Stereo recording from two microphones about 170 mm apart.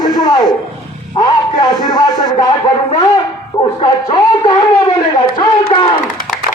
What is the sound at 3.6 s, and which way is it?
A man's voice, 30° left (ahead or behind).